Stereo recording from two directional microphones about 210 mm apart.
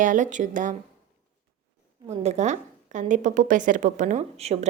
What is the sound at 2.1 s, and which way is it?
A woman's voice, 30° right (ahead or behind).